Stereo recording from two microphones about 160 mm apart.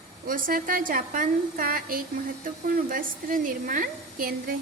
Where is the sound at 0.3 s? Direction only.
60° right (ahead or behind).